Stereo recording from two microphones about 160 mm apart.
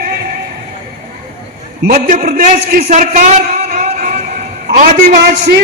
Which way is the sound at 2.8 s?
45° right (ahead or behind).